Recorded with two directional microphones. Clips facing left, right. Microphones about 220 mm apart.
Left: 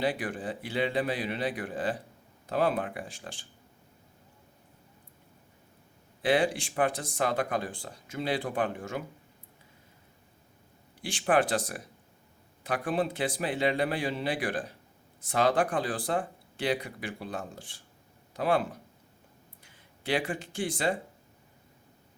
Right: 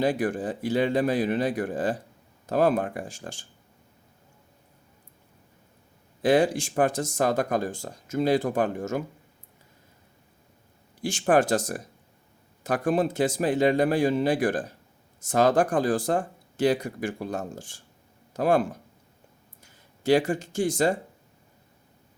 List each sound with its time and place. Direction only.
0.0 s speech: 45° right (ahead or behind)
6.2 s speech: 45° right (ahead or behind)
11.0 s speech: 45° right (ahead or behind)